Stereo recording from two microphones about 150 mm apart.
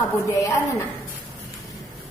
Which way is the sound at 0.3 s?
20° left (ahead or behind).